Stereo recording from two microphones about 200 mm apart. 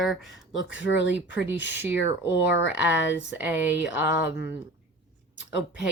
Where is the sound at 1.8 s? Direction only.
15° right (ahead or behind).